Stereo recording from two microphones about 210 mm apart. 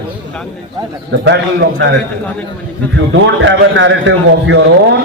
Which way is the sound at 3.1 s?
65° right (ahead or behind).